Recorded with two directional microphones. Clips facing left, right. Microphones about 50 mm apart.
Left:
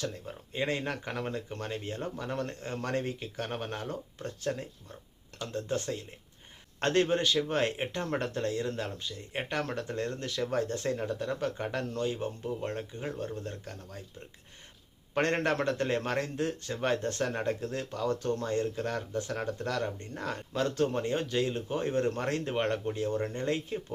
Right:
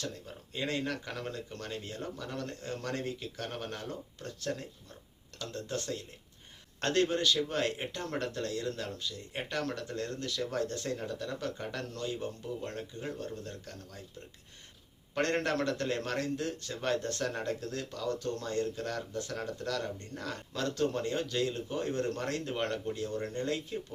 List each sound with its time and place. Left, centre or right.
0.0 s speech: left
15.1 s speech: left